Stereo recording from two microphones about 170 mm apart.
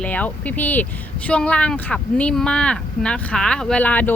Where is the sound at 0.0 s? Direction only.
10° left (ahead or behind).